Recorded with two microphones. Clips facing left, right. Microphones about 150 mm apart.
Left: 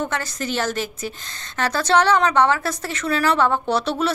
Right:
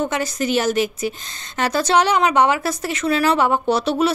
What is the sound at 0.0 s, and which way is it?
A woman's voice, 15° right (ahead or behind).